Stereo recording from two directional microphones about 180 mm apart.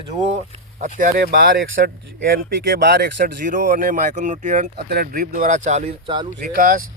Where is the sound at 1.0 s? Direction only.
50° right (ahead or behind); by 2.4 s 70° right (ahead or behind).